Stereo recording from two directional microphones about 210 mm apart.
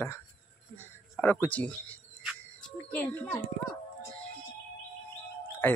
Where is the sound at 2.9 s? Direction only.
5° left (ahead or behind).